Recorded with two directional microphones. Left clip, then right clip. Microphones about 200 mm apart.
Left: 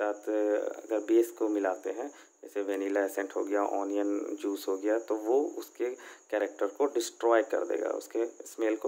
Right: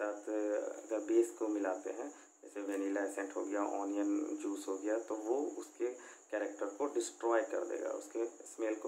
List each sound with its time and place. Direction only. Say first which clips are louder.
0.0 s speech: left 8 dB; 45° left (ahead or behind)